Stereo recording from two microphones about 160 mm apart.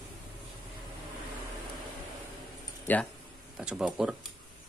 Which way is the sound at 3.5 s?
5° right (ahead or behind).